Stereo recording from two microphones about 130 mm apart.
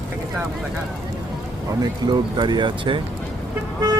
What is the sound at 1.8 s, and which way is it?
Speech, 35° right (ahead or behind).